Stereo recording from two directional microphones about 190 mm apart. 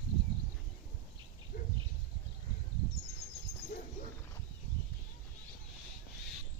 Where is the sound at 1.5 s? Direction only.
50° left (ahead or behind).